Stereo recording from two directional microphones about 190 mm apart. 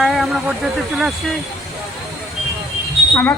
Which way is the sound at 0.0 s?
Centre (ahead or behind).